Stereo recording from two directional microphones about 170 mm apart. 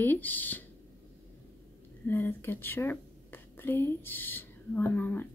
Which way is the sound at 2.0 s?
10° left (ahead or behind).